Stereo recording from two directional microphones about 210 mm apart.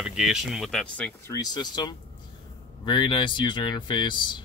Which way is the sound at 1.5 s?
20° left (ahead or behind).